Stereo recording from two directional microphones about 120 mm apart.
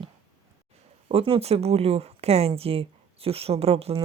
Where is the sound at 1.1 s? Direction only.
50° right (ahead or behind).